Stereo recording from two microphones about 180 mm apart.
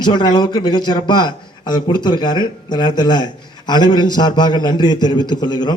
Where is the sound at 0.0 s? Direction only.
25° left (ahead or behind).